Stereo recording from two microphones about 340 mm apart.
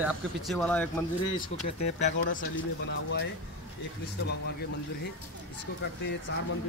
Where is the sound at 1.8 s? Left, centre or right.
Left.